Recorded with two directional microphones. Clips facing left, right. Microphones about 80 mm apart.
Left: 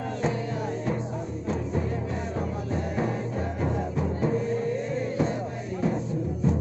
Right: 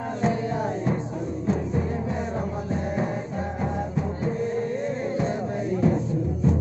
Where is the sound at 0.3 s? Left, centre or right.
Right.